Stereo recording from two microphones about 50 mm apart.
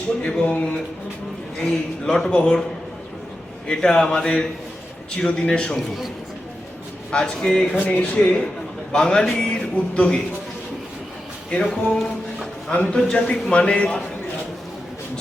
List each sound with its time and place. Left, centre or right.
0.2 s speech: left
1.5 s speech: centre
3.7 s speech: centre
7.1 s speech: centre
7.9 s speech: left
8.9 s speech: centre
11.6 s speech: centre
12.7 s speech: left